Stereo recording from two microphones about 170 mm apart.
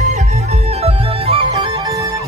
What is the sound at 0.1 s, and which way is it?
Music, 40° right (ahead or behind).